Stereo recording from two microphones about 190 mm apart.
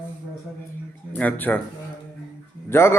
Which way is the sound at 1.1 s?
10° left (ahead or behind).